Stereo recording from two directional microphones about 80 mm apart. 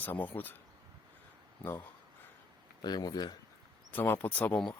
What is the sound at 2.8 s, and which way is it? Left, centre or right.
Speech, left.